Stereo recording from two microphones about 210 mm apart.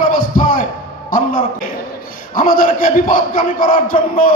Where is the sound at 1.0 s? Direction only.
40° left (ahead or behind).